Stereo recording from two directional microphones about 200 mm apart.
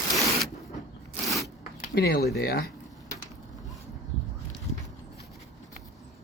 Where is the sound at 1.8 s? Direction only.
50° left (ahead or behind).